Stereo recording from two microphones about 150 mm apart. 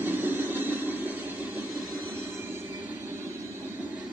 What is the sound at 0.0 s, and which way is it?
Vehicle, 15° right (ahead or behind).